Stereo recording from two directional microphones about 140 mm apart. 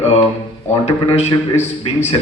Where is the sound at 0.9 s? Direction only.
50° left (ahead or behind).